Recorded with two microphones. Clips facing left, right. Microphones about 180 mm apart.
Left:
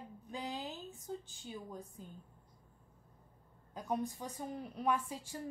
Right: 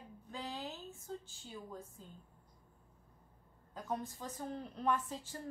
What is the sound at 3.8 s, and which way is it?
A woman's voice, 15° left (ahead or behind).